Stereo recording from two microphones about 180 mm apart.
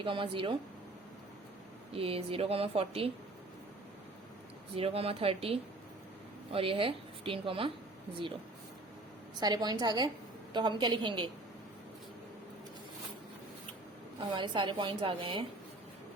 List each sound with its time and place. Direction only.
0.0 s a woman's voice: 30° right (ahead or behind)
1.9 s speech: 30° right (ahead or behind)
4.7 s speech: 30° right (ahead or behind)
9.4 s a woman's voice: 20° right (ahead or behind)
14.2 s a woman's voice: 25° right (ahead or behind)